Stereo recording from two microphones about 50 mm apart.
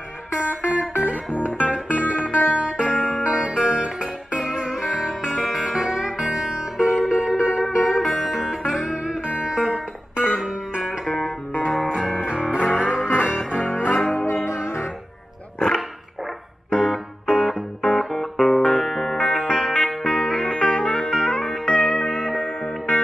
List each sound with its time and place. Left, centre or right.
0.4 s music: right
14.2 s music: left
16.7 s music: centre